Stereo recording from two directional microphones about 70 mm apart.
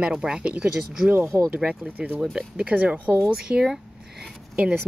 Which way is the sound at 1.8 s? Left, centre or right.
Right.